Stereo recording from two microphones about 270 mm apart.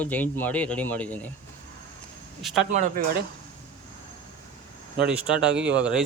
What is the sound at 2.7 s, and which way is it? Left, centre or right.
Speech, right.